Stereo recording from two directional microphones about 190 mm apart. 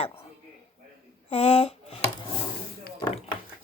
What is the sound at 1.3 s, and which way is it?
Speech, 35° left (ahead or behind).